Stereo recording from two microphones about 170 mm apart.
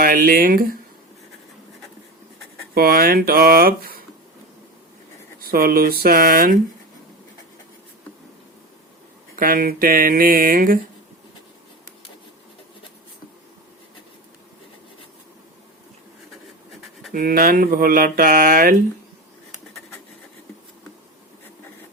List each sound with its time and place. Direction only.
0.0 s speech: 55° right (ahead or behind)
2.7 s speech: 60° right (ahead or behind)
5.4 s speech: 60° right (ahead or behind)
9.3 s speech: 55° right (ahead or behind)
17.1 s speech: 60° right (ahead or behind)